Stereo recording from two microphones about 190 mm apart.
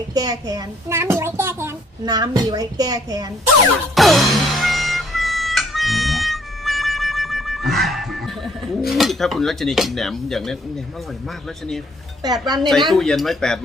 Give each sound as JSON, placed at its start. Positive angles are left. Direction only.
{"t": 0.1, "sound": "a child's voice", "side_deg": -20}
{"t": 3.9, "sound": "music", "side_deg": 0}
{"t": 8.9, "sound": "cutlery", "side_deg": 0}
{"t": 12.2, "sound": "a child's voice", "side_deg": -20}
{"t": 12.9, "sound": "cutlery", "side_deg": 0}